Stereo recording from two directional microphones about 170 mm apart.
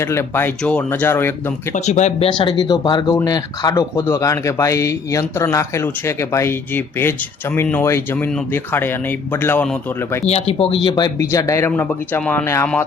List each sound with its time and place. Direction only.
0.0 s speech: 15° left (ahead or behind)
1.7 s speech: 45° left (ahead or behind)
2.6 s speech: 25° left (ahead or behind)
10.2 s speech: 35° left (ahead or behind)
10.8 s speech: 25° left (ahead or behind)